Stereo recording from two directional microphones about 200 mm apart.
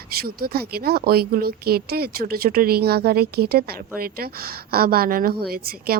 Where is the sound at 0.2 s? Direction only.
50° right (ahead or behind).